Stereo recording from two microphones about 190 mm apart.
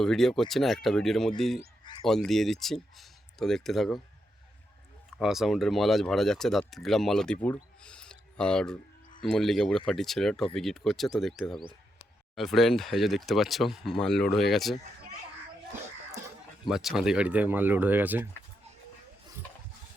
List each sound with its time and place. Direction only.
0.0 s speech: centre (ahead or behind)
1.8 s a sound: 25° left (ahead or behind)
2.0 s speech: centre (ahead or behind)
5.1 s speech: centre (ahead or behind)
16.6 s speech: centre (ahead or behind)